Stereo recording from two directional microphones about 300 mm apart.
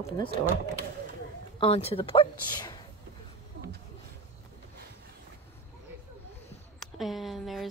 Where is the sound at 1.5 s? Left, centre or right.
Centre.